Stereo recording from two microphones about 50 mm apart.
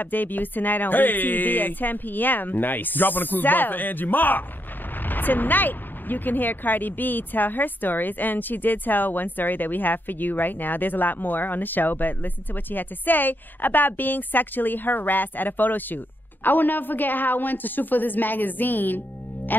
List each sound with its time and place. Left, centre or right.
0.0 s speech: left